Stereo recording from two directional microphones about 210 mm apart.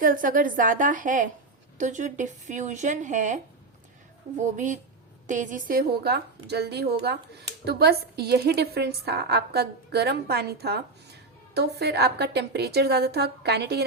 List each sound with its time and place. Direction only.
0.0 s a woman's voice: 40° right (ahead or behind)